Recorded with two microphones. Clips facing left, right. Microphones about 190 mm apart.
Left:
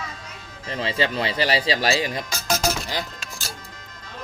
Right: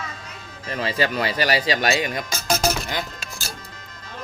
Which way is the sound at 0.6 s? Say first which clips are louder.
Right 1 dB; 25° left (ahead or behind).